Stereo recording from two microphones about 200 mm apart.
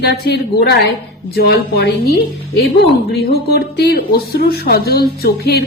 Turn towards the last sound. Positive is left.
turn(degrees=50)  # may be behind; listen again after turning